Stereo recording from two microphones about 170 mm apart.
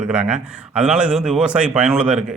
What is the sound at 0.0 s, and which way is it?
Speech, 5° right (ahead or behind).